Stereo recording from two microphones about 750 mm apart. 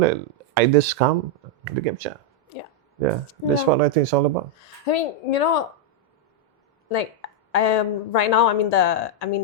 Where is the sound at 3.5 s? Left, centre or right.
Right.